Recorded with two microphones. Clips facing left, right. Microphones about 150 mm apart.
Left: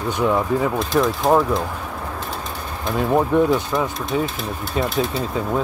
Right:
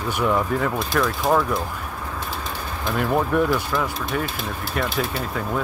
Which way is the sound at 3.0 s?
25° left (ahead or behind).